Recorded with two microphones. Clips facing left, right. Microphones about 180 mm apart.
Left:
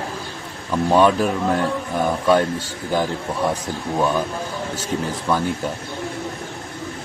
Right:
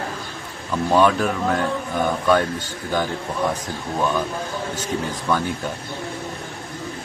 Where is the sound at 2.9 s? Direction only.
5° left (ahead or behind).